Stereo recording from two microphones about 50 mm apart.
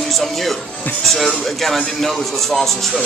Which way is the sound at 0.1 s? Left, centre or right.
Centre.